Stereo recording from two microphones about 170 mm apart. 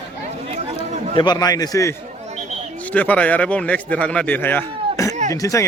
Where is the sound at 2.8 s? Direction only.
10° left (ahead or behind).